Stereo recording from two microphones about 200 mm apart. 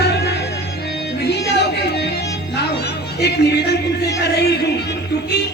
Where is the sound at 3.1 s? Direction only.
55° left (ahead or behind).